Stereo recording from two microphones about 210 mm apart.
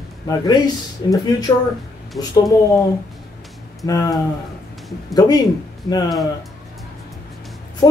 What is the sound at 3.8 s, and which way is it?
Speech, 15° left (ahead or behind).